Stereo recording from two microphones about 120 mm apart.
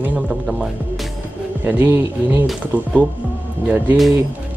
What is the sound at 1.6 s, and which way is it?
Speech, 15° right (ahead or behind).